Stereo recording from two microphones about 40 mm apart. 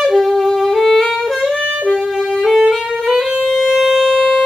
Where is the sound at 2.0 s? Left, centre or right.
Centre.